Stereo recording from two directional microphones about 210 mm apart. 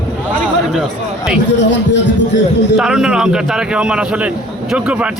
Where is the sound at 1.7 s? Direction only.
60° left (ahead or behind).